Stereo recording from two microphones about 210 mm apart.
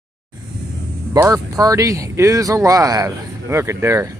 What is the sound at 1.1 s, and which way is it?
Speech, 15° right (ahead or behind).